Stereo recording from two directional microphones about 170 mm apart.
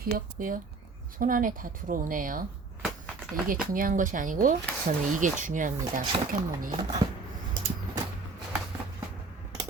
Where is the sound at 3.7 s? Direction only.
55° right (ahead or behind).